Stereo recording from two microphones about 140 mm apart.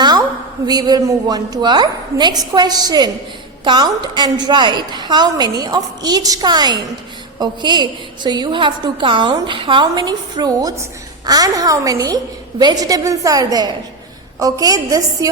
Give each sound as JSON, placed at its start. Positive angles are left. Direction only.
{"t": 0.0, "sound": "a woman's voice", "side_deg": -30}